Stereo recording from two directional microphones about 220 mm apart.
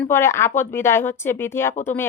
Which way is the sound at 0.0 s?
10° left (ahead or behind).